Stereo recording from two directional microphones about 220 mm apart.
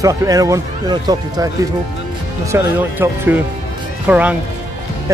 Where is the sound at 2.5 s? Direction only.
10° right (ahead or behind).